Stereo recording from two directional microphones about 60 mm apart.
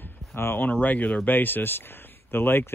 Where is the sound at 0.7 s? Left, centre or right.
Left.